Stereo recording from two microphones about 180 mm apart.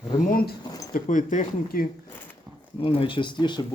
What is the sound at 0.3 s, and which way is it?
Speech, 55° left (ahead or behind).